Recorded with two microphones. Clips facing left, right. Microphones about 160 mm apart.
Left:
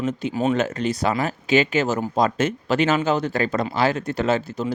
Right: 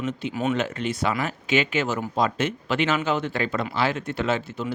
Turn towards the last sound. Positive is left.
turn(degrees=40)  # may be behind; listen again after turning